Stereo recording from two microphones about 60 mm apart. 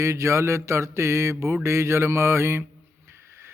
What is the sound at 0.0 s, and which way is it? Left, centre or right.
Speech, right.